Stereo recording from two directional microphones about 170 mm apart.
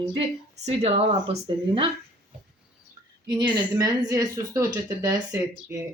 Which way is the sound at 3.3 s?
25° right (ahead or behind).